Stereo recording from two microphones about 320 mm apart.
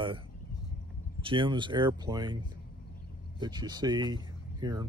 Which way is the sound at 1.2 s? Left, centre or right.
Centre.